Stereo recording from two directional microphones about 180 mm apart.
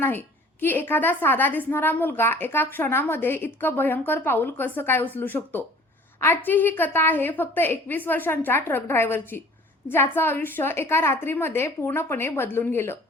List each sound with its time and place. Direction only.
0.0 s a woman's voice: 10° left (ahead or behind)